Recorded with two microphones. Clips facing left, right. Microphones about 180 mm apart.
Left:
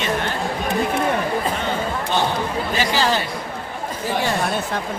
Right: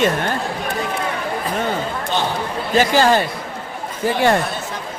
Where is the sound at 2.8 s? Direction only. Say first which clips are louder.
Right 7 dB; 50° right (ahead or behind).